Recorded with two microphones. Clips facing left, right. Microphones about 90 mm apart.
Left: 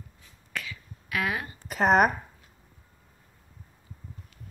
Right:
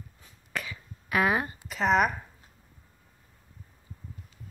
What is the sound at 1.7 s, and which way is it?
Speech, 50° left (ahead or behind).